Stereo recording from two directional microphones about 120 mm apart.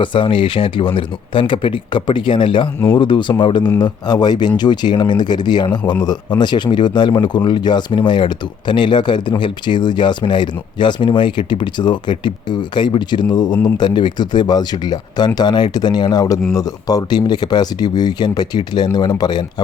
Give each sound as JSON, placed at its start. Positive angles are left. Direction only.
{"t": 0.0, "sound": "speech", "side_deg": 45}